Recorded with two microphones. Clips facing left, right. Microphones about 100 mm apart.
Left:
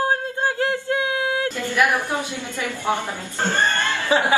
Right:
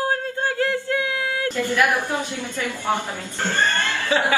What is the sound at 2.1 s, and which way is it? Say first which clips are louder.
Speech: even; 15° right (ahead or behind).